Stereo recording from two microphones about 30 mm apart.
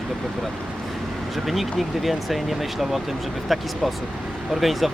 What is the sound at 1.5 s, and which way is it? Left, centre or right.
Speech, centre.